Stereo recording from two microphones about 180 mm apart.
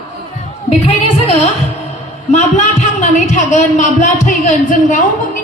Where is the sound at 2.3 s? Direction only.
40° left (ahead or behind).